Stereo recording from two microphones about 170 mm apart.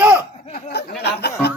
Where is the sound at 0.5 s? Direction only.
65° left (ahead or behind).